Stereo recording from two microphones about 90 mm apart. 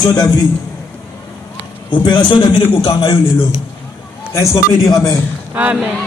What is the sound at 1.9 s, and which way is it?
A man's voice, 65° left (ahead or behind).